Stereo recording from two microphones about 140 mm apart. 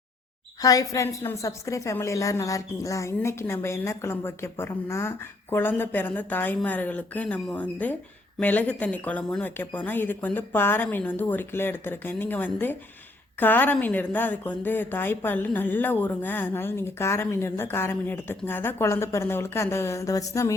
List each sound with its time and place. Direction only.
0.6 s a woman's voice: 25° left (ahead or behind)